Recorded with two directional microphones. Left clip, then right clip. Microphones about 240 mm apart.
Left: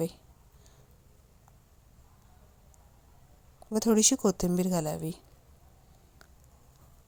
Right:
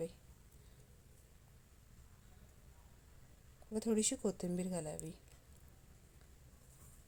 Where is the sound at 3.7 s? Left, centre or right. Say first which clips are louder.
Left 12 dB; left.